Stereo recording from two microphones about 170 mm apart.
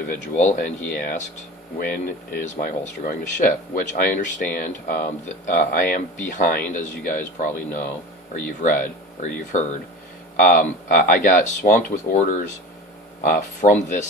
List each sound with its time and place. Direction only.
0.1 s speech: 50° left (ahead or behind)